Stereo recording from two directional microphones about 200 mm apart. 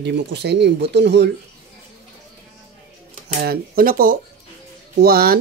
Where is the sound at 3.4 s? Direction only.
50° right (ahead or behind).